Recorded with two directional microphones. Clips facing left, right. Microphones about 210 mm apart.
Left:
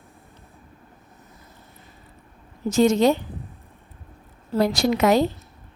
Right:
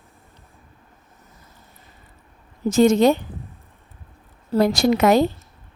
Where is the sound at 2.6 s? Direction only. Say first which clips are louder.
Right 3 dB; 50° right (ahead or behind).